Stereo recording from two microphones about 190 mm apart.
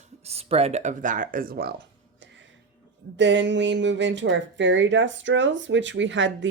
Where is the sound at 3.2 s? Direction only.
70° right (ahead or behind).